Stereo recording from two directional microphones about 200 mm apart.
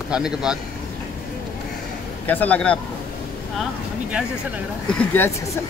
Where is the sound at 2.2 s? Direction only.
10° left (ahead or behind).